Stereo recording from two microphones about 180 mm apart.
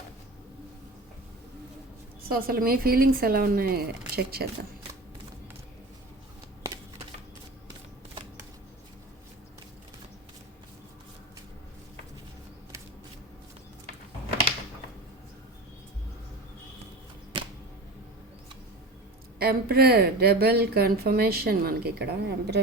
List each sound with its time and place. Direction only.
2.3 s a woman's voice: 55° right (ahead or behind)
17.3 s arrow: 30° right (ahead or behind)
19.4 s a woman's voice: 55° right (ahead or behind)